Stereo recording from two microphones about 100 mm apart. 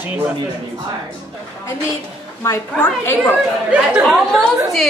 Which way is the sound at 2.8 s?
20° left (ahead or behind).